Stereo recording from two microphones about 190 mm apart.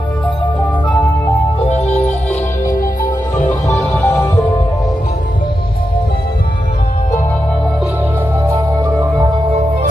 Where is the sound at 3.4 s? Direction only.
15° left (ahead or behind).